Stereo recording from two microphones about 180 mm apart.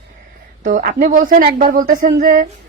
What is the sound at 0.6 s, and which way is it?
A woman's voice, 45° right (ahead or behind).